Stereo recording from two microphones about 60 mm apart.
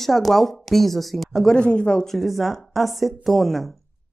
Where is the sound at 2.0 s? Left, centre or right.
Centre.